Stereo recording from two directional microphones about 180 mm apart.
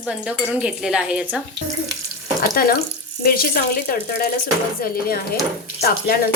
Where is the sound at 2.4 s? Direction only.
55° left (ahead or behind).